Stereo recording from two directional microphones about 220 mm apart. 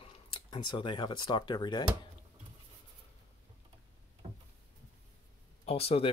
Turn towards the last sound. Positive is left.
turn(degrees=25)  # may be behind; listen again after turning